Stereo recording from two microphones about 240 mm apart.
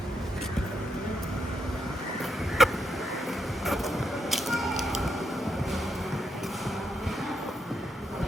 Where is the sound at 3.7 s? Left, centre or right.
Centre.